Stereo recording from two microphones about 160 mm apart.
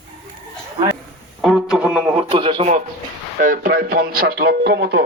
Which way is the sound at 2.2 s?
35° right (ahead or behind).